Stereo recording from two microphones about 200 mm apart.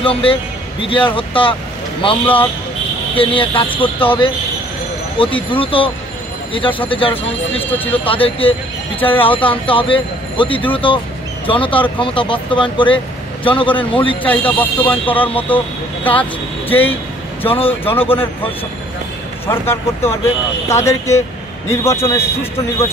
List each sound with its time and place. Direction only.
0.0 s speech: 25° left (ahead or behind)
14.6 s speech: 10° left (ahead or behind)
17.5 s speech: 30° left (ahead or behind)
19.4 s speech: 10° left (ahead or behind)